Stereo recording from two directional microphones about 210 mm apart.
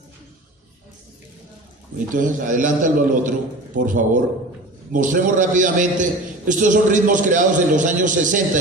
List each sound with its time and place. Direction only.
2.1 s a man's voice: 40° right (ahead or behind)